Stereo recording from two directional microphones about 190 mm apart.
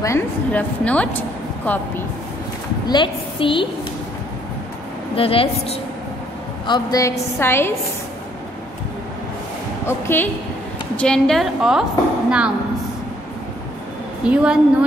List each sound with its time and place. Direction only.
0.0 s a woman's voice: 10° left (ahead or behind)
2.9 s a woman's voice: 25° left (ahead or behind)
5.1 s a woman's voice: 30° left (ahead or behind)
6.7 s a woman's voice: 20° left (ahead or behind)
9.8 s a woman's voice: 10° left (ahead or behind); by 12.5 s 5° right (ahead or behind)
14.2 s a woman's voice: 5° right (ahead or behind)